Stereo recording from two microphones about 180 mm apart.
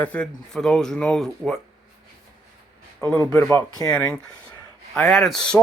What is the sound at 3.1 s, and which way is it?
Speech, 15° left (ahead or behind).